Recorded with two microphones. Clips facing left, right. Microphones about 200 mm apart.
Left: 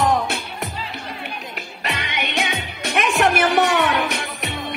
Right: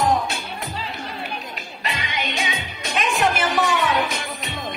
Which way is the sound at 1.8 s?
65° left (ahead or behind).